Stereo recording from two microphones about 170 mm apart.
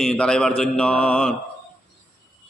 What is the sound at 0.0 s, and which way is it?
A man's voice, 5° left (ahead or behind).